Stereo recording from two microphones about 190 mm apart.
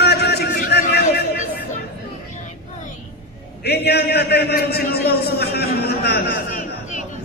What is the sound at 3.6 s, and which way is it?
A man's voice, 60° left (ahead or behind).